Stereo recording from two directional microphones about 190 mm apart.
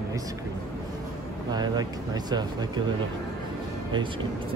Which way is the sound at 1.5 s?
20° right (ahead or behind).